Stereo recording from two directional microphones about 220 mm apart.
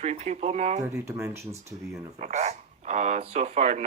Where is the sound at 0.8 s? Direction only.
15° right (ahead or behind).